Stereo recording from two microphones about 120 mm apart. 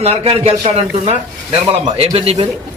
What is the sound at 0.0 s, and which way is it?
A man's voice, 55° right (ahead or behind).